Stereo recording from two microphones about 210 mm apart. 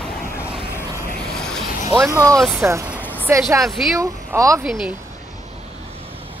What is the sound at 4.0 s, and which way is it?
Speech, 15° right (ahead or behind).